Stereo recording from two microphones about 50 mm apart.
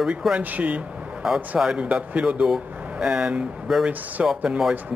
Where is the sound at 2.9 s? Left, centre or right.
Centre.